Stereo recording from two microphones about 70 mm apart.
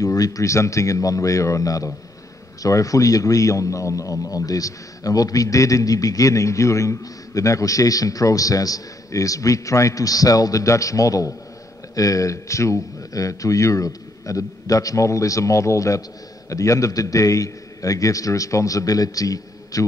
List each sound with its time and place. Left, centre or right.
0.0 s a man's voice: left